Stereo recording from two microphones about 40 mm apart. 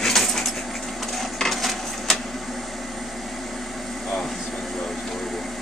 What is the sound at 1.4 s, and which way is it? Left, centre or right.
Coin, centre.